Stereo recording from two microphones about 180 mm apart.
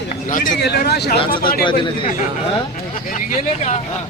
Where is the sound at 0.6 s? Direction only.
65° left (ahead or behind).